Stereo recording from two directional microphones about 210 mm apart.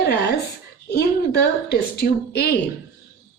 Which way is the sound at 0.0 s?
50° left (ahead or behind).